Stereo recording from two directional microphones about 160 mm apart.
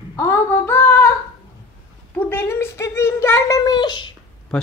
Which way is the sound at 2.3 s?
15° left (ahead or behind).